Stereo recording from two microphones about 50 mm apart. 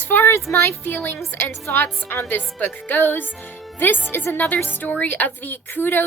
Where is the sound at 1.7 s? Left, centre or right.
Left.